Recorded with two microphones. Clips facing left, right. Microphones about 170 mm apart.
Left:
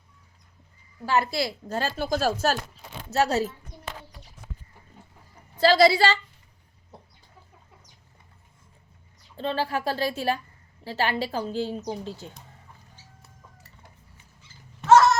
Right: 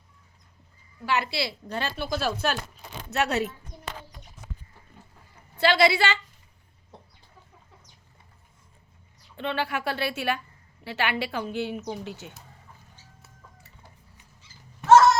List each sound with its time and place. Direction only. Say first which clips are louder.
1.0 s a woman's voice: left 3 dB; 40° left (ahead or behind)
5.5 s a woman's voice: left 3 dB; 35° left (ahead or behind)
9.3 s a woman's voice: left 2 dB; 35° left (ahead or behind)